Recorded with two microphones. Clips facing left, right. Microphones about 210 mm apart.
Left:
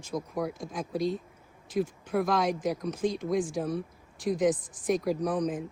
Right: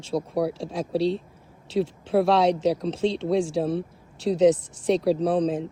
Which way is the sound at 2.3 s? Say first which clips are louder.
Right 7 dB; 75° right (ahead or behind).